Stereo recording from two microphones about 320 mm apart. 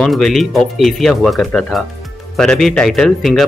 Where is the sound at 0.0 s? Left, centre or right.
Centre.